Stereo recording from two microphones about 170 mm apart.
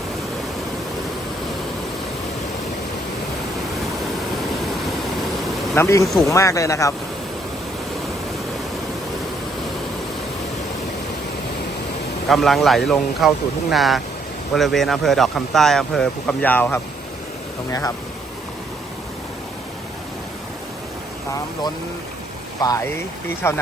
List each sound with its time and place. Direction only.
5.7 s speech: 15° left (ahead or behind)
12.3 s a man's voice: centre (ahead or behind); by 17.9 s 20° left (ahead or behind)
22.6 s speech: 25° left (ahead or behind)